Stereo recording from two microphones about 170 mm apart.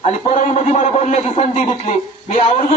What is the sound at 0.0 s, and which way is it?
A man's voice, 40° left (ahead or behind).